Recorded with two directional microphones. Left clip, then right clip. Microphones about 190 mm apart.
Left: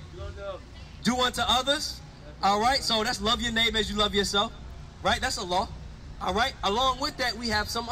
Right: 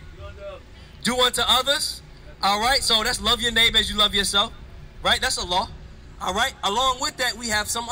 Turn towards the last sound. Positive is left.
turn(degrees=-20)  # may be behind; listen again after turning